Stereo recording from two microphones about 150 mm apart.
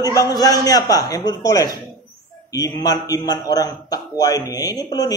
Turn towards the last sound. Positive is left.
turn(degrees=25)  # may be behind; listen again after turning